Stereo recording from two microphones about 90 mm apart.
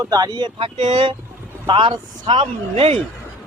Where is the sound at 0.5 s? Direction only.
70° right (ahead or behind).